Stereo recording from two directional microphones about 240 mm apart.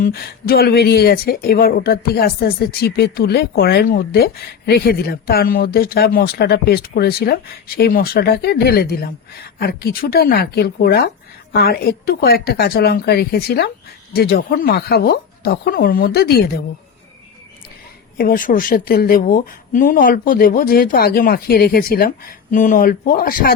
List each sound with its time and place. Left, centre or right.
0.0 s speech: left
18.2 s speech: left